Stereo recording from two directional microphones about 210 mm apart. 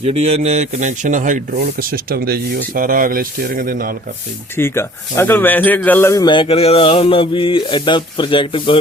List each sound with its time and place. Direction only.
0.0 s speech: 30° right (ahead or behind)
4.5 s speech: 10° left (ahead or behind)